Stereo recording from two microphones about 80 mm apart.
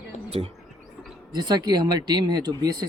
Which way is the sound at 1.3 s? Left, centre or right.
Right.